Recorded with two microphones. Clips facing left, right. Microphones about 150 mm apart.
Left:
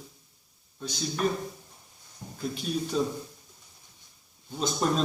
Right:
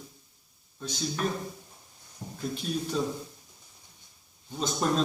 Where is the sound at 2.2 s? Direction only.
15° right (ahead or behind).